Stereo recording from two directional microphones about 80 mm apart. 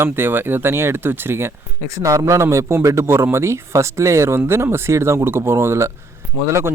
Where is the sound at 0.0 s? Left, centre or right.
Right.